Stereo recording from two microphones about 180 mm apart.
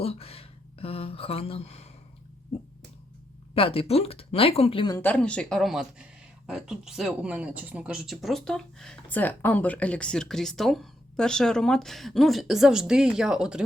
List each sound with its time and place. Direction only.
0.0 s a sound: 35° left (ahead or behind)
3.5 s speech: 30° left (ahead or behind)
4.9 s speech: 10° left (ahead or behind)